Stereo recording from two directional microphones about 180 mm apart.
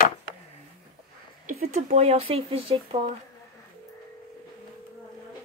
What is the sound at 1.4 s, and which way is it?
Speech, 40° right (ahead or behind).